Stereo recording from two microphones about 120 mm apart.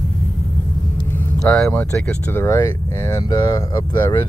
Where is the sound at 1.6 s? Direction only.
15° left (ahead or behind).